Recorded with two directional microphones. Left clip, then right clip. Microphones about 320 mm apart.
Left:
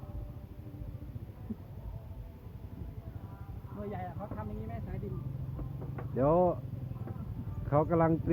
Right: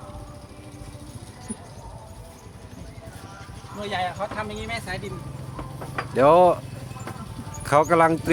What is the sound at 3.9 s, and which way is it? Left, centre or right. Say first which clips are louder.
Speech: right 18 dB; right.